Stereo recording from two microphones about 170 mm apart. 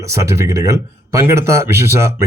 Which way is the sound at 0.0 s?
20° right (ahead or behind).